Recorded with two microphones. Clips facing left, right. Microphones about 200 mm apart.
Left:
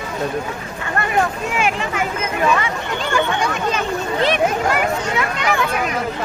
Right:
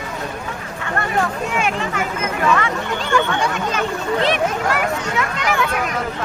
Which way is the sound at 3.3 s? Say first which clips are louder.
Left 1 dB; 20° left (ahead or behind).